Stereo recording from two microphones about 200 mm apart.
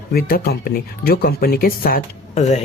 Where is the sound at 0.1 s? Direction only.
50° left (ahead or behind).